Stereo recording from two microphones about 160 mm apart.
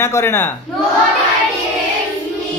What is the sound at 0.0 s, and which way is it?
Speech, 15° left (ahead or behind).